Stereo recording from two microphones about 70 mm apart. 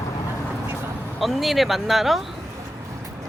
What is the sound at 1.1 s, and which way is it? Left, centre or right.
Speech, centre.